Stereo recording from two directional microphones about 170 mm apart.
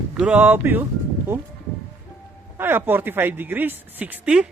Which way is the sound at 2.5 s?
10° right (ahead or behind).